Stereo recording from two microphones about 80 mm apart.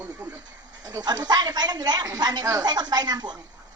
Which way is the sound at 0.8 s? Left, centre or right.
Right.